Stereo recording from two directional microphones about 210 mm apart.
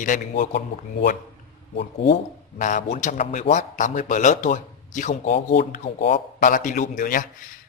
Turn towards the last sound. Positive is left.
turn(degrees=40)  # may be behind; listen again after turning